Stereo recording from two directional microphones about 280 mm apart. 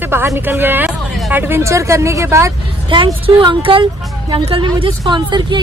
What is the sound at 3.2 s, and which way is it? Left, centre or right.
Speech, centre.